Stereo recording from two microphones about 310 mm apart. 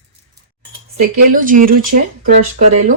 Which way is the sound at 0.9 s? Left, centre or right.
Right.